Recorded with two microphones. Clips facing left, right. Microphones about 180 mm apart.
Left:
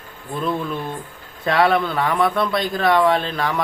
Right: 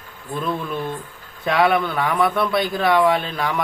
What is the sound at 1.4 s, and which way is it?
Speech, centre (ahead or behind).